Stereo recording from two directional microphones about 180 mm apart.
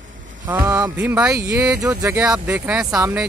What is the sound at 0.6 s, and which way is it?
Speech, 10° right (ahead or behind).